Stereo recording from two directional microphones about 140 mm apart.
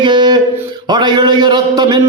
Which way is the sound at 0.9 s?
30° right (ahead or behind).